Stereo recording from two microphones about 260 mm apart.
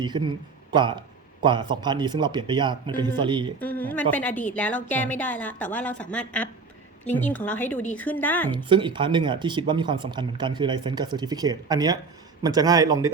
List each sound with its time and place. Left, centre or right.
0.0 s speech: centre
3.6 s a woman's voice: centre
8.4 s speech: centre